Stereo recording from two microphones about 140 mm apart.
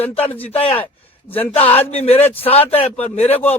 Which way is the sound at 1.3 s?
10° left (ahead or behind).